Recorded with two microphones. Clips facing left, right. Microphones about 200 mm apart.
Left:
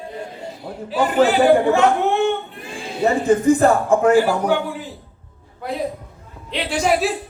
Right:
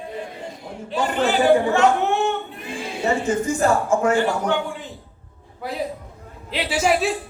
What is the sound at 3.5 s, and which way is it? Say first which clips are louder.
Speech: left 4 dB; 55° left (ahead or behind).